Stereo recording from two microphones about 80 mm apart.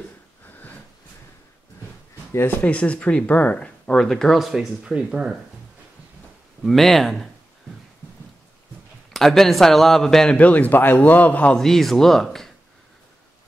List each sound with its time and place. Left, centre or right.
2.3 s a man's voice: left
2.6 s speech: centre
6.6 s a man's voice: centre
9.1 s a man's voice: centre
10.4 s a man's voice: left
11.5 s a man's voice: centre